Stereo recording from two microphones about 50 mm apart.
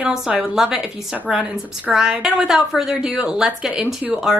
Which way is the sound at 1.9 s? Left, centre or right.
Centre.